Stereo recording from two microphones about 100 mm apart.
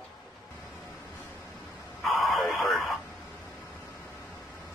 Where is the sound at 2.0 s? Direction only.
Centre (ahead or behind).